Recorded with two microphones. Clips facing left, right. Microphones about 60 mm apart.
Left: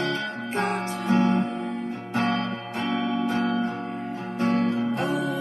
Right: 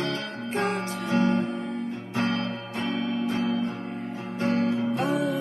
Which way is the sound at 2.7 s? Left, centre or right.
Left.